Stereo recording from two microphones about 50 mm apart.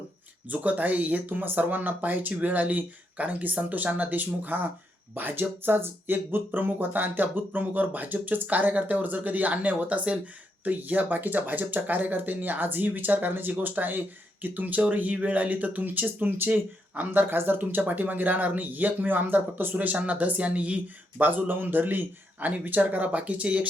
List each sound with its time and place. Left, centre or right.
0.4 s speech: right
16.9 s speech: right
17.2 s speech: right